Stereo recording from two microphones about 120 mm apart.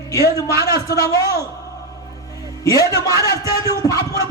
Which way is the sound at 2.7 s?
30° left (ahead or behind).